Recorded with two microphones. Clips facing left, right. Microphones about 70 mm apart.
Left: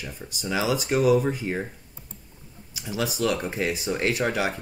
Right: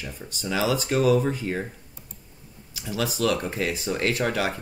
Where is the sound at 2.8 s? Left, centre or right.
Centre.